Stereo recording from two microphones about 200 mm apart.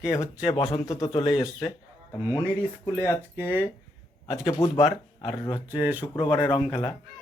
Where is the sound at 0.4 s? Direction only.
25° left (ahead or behind).